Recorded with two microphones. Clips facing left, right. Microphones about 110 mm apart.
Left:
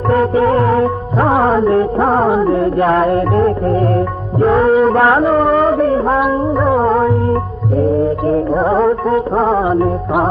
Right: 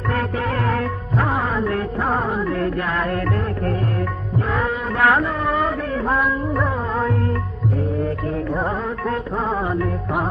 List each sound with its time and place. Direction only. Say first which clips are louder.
0.1 s music: left 12 dB; 30° left (ahead or behind)
3.2 s music: left 10 dB; 30° left (ahead or behind)
3.9 s music: left 8 dB; 40° left (ahead or behind)
4.9 s a sound: left 7 dB; 30° left (ahead or behind)
6.7 s music: left 12 dB; 50° left (ahead or behind)
7.2 s music: left 8 dB; 35° left (ahead or behind)